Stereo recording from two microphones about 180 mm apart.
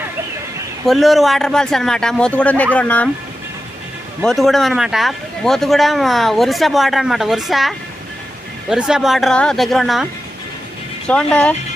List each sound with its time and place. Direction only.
0.9 s a man's voice: centre (ahead or behind)
4.2 s a man's voice: centre (ahead or behind)
11.1 s speech: 5° left (ahead or behind)